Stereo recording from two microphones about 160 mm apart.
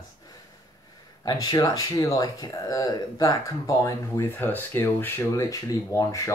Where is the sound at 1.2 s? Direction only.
25° left (ahead or behind).